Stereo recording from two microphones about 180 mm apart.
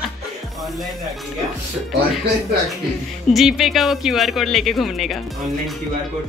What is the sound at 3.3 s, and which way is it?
Speech, centre (ahead or behind).